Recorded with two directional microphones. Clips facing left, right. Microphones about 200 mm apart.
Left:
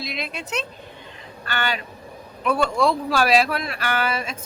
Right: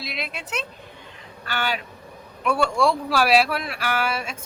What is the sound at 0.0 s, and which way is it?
Speech, 5° right (ahead or behind).